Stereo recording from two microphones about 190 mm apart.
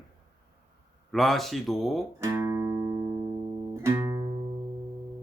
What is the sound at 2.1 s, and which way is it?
Music, 15° right (ahead or behind).